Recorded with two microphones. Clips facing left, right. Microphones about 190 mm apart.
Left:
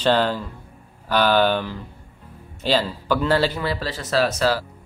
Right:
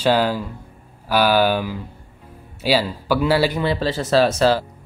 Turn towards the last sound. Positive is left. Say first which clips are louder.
# right 4 dB
turn(degrees=-25)  # may be behind; listen again after turning